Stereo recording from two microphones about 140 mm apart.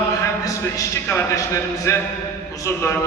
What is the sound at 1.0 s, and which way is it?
Speech, 15° left (ahead or behind).